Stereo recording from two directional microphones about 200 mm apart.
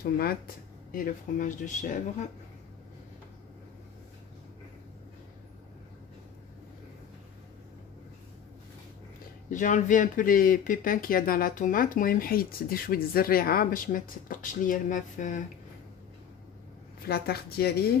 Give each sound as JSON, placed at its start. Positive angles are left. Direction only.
{"t": 0.0, "sound": "speech", "side_deg": 50}
{"t": 9.5, "sound": "speech", "side_deg": 40}
{"t": 17.0, "sound": "speech", "side_deg": 50}